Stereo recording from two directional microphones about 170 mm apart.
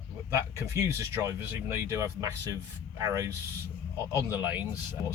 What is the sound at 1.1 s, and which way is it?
Speech, 15° right (ahead or behind).